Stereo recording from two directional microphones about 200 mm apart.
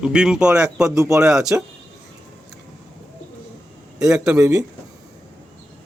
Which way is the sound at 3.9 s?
5° right (ahead or behind).